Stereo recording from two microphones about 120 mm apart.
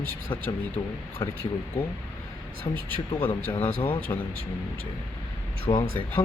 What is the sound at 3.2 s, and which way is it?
Speech, 15° left (ahead or behind).